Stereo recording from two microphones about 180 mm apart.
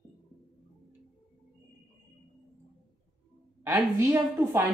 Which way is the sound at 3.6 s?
15° right (ahead or behind).